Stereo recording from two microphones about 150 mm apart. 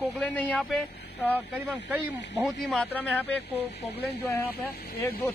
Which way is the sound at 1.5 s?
10° right (ahead or behind).